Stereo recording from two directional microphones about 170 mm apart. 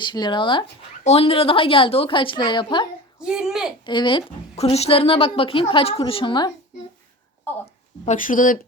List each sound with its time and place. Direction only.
0.0 s a woman's voice: 25° left (ahead or behind)
3.2 s speech: 5° right (ahead or behind)
3.8 s a woman's voice: 30° left (ahead or behind)
8.0 s speech: 50° left (ahead or behind)